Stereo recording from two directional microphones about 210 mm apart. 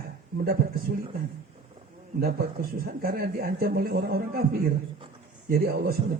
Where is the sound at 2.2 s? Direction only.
45° right (ahead or behind).